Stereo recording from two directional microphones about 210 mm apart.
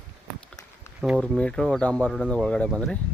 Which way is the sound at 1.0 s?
Centre (ahead or behind).